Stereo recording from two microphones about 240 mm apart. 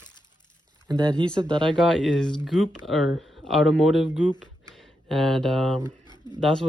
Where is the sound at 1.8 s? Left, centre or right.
Centre.